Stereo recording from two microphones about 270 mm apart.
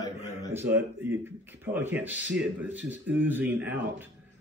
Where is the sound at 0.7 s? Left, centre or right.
Centre.